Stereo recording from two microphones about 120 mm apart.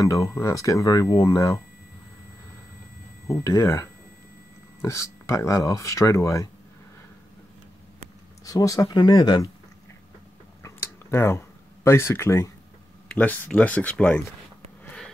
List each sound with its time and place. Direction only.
0.0 s speech: 25° left (ahead or behind)
3.3 s speech: 25° left (ahead or behind)
8.5 s speech: 30° left (ahead or behind)
10.6 s a sound: 20° left (ahead or behind)
13.1 s speech: 15° left (ahead or behind)